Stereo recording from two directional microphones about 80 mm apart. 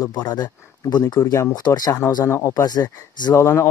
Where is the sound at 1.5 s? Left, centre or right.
Left.